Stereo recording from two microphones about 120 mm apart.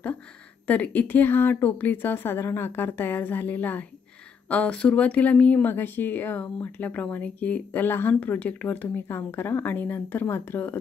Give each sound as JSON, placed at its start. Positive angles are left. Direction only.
{"t": 0.7, "sound": "speech", "side_deg": 15}